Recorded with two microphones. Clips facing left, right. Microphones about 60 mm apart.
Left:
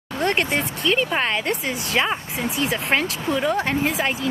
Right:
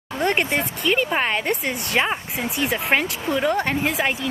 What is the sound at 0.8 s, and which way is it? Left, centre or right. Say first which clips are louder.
Speech: even; centre.